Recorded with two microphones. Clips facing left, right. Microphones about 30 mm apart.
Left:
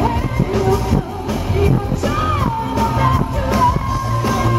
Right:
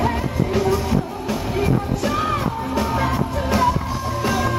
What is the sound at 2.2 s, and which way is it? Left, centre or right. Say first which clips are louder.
Music: left 3 dB; centre.